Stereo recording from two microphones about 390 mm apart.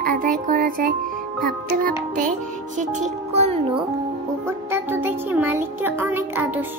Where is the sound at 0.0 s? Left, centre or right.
Right.